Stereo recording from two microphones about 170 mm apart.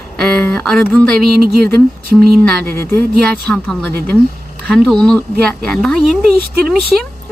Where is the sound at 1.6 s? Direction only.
60° right (ahead or behind).